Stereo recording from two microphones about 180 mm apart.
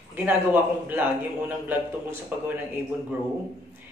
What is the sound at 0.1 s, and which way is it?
Speech, 10° right (ahead or behind).